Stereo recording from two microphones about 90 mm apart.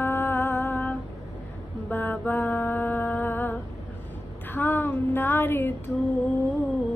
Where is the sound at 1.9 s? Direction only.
20° left (ahead or behind).